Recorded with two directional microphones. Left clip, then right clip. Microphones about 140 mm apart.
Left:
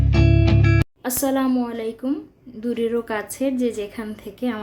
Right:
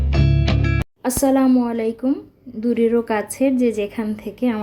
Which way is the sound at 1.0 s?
25° right (ahead or behind).